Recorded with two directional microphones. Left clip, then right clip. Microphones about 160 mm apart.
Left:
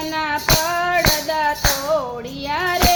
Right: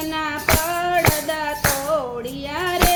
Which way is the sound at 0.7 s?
40° right (ahead or behind).